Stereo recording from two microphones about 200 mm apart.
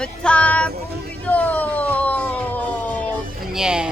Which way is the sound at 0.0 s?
5° left (ahead or behind).